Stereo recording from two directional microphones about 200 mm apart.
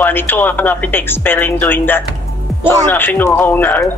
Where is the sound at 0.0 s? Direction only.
10° left (ahead or behind).